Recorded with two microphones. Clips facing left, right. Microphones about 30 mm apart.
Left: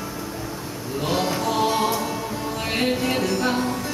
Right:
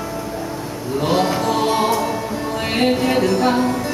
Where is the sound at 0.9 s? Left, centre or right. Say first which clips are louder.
Right 6 dB; centre.